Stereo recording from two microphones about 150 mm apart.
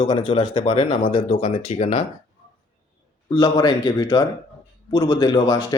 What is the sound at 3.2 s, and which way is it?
Speech, 25° left (ahead or behind).